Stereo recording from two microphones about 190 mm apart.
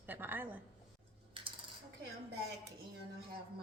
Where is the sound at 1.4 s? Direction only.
25° right (ahead or behind).